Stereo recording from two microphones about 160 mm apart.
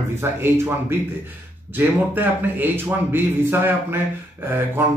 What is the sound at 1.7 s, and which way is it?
Speech, 10° right (ahead or behind).